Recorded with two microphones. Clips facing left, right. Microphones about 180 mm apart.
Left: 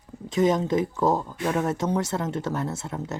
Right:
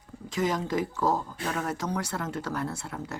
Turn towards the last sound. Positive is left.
turn(degrees=20)  # may be behind; listen again after turning